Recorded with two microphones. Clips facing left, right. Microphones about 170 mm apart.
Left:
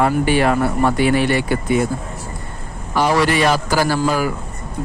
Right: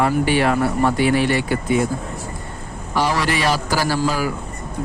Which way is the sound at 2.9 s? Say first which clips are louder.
Left 4 dB; 55° left (ahead or behind).